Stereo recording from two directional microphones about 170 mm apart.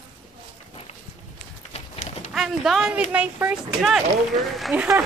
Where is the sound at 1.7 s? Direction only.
40° left (ahead or behind).